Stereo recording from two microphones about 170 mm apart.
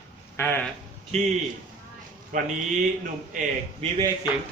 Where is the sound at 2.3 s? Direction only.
50° right (ahead or behind).